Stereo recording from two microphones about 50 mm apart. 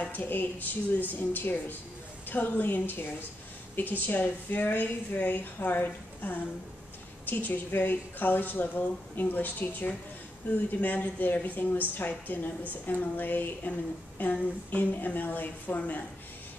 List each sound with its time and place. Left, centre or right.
0.0 s speech: left